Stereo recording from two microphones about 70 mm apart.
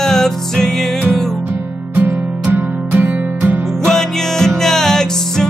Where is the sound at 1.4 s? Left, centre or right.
Right.